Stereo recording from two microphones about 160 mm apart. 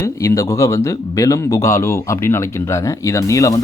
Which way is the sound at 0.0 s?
20° left (ahead or behind).